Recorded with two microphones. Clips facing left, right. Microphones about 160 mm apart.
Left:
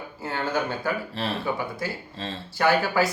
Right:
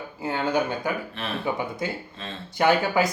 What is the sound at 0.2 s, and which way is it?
Speech, 15° right (ahead or behind).